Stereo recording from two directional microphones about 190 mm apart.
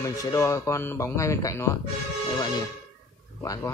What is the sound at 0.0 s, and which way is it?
Speech, 15° left (ahead or behind).